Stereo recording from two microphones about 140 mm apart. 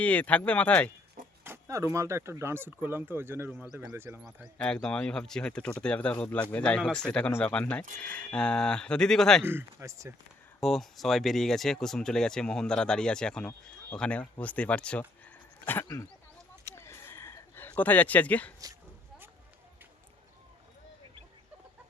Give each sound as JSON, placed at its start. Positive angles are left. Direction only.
{"t": 0.0, "sound": "speech", "side_deg": 10}
{"t": 1.5, "sound": "speech", "side_deg": -20}
{"t": 4.5, "sound": "speech", "side_deg": 5}
{"t": 9.5, "sound": "speech", "side_deg": -20}
{"t": 10.6, "sound": "speech", "side_deg": 0}
{"t": 16.6, "sound": "a sound", "side_deg": 15}